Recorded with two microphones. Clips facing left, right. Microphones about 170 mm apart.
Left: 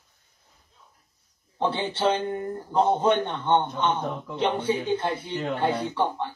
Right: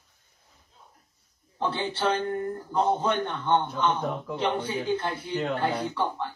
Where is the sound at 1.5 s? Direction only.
25° left (ahead or behind).